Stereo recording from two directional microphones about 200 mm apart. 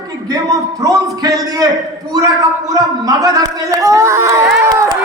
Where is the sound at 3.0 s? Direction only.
15° right (ahead or behind).